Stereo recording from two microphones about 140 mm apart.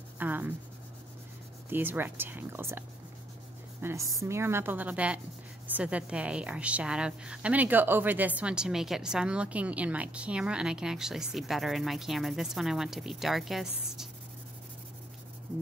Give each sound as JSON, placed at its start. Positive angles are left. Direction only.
{"t": 0.2, "sound": "writing", "side_deg": -15}
{"t": 1.7, "sound": "a woman's voice", "side_deg": -15}
{"t": 3.8, "sound": "a woman's voice", "side_deg": -20}